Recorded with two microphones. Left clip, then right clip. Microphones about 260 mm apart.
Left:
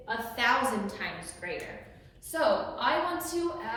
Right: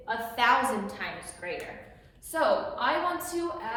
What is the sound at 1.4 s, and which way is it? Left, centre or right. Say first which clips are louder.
A woman's voice: right 1 dB; centre.